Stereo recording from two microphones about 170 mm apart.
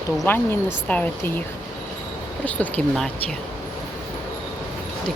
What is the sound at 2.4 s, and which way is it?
Speech, 10° left (ahead or behind).